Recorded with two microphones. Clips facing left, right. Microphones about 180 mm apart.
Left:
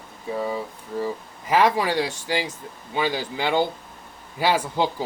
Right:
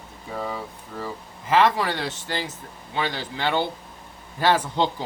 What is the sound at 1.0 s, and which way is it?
Speech, 15° left (ahead or behind).